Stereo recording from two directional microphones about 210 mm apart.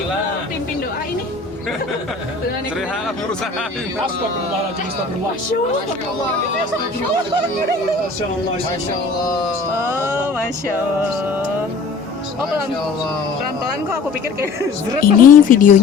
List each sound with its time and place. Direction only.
15.0 s speech: 40° left (ahead or behind)